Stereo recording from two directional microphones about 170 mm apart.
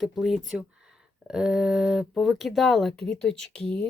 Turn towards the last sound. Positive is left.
turn(degrees=5)  # may be behind; listen again after turning